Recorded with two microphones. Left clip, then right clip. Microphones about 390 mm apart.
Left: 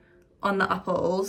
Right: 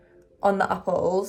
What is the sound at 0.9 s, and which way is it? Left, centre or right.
Speech, right.